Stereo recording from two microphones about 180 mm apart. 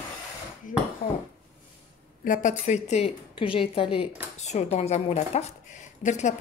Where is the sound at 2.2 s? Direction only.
45° left (ahead or behind).